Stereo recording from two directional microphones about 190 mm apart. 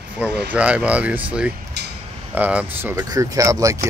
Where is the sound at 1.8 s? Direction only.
60° right (ahead or behind).